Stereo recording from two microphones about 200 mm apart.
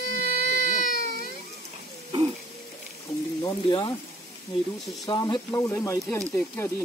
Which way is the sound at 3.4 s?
20° left (ahead or behind).